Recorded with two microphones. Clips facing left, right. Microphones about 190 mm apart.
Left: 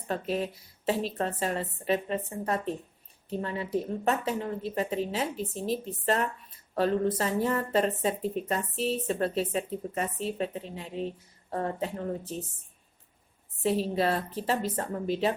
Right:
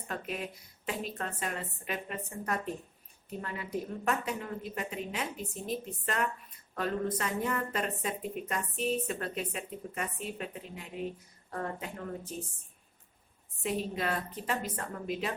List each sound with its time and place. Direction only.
0.1 s speech: 30° left (ahead or behind)
13.6 s speech: 30° left (ahead or behind)